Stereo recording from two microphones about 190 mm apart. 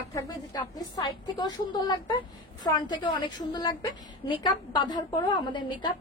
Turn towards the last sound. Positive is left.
turn(degrees=25)  # may be behind; listen again after turning